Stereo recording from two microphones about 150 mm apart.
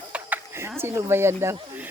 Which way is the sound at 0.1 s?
15° right (ahead or behind).